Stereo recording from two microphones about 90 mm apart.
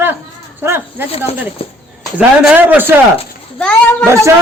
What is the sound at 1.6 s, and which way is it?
Speech, 90° left.